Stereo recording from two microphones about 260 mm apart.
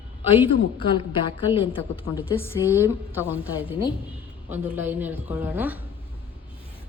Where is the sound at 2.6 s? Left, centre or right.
Centre.